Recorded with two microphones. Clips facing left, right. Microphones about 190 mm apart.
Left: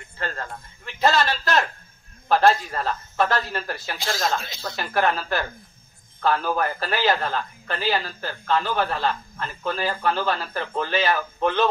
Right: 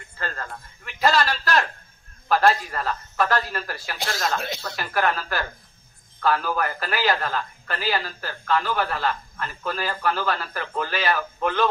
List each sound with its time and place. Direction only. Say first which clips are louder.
0.4 s a man's voice: left 1 dB; 25° left (ahead or behind)
4.0 s speech: even; 60° right (ahead or behind)
4.7 s a man's voice: left 2 dB; 25° left (ahead or behind)